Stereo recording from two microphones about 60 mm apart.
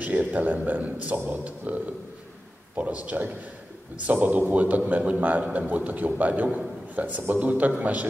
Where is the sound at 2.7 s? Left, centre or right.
Right.